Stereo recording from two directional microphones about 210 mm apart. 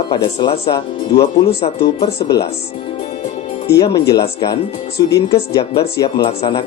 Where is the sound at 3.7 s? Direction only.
15° left (ahead or behind).